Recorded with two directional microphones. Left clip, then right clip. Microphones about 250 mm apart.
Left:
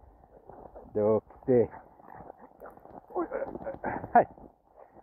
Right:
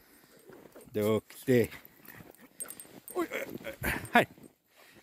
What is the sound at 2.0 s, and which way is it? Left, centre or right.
Dog, right.